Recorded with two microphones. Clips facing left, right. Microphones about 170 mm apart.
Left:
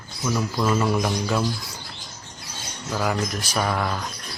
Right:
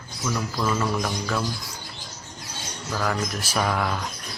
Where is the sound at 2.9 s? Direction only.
10° left (ahead or behind).